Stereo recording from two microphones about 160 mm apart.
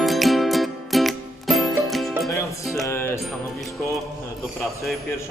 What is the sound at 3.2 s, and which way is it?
Music, centre (ahead or behind).